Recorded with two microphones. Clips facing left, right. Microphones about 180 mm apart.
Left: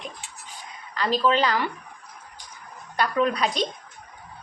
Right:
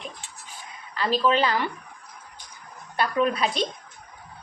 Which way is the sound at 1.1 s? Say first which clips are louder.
Even; 10° right (ahead or behind).